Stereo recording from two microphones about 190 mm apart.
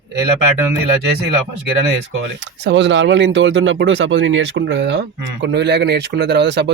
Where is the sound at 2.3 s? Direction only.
70° right (ahead or behind).